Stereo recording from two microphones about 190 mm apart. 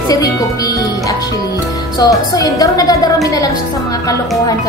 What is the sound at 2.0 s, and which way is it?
A woman's voice, 20° left (ahead or behind).